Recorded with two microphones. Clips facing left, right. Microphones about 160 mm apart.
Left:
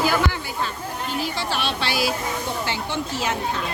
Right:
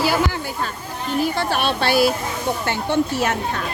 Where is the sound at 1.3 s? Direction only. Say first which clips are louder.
Right 5 dB; 55° right (ahead or behind).